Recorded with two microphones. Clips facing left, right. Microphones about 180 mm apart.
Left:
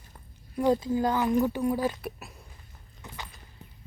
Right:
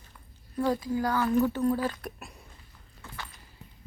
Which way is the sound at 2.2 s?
Centre (ahead or behind).